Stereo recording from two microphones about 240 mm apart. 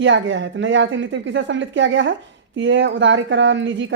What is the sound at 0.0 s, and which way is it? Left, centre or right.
Speech, right.